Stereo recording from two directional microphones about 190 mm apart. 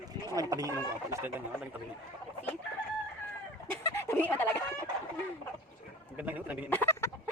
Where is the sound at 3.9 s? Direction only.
10° left (ahead or behind).